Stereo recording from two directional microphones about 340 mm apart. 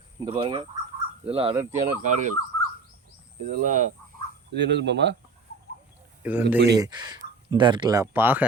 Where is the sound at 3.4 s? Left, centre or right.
Right.